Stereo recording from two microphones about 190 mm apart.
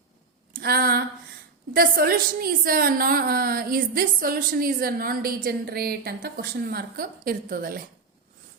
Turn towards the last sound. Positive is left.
turn(degrees=-50)  # may be behind; listen again after turning